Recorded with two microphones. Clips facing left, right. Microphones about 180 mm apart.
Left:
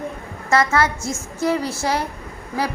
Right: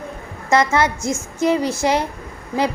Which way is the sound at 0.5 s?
20° right (ahead or behind).